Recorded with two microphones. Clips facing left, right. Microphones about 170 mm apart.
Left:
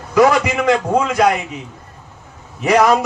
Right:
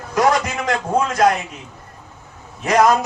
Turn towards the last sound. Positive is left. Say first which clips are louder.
# left 2 dB
turn(degrees=75)  # may be behind; listen again after turning